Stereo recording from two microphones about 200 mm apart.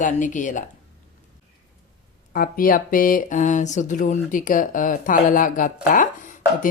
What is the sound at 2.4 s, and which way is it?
Speech, 45° left (ahead or behind).